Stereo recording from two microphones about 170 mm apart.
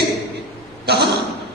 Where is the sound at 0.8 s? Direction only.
75° right (ahead or behind).